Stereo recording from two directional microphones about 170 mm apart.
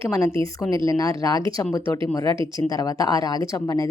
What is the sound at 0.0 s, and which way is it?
A woman's voice, 15° left (ahead or behind).